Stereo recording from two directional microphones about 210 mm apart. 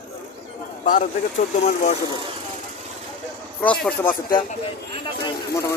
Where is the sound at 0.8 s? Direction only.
35° left (ahead or behind).